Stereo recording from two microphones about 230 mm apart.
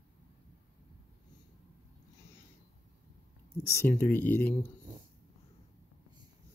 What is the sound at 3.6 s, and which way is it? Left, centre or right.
Speech, centre.